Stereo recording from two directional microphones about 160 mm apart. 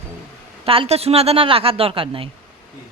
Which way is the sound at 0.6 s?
35° right (ahead or behind).